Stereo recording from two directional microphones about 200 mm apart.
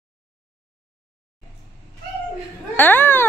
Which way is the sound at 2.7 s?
10° left (ahead or behind).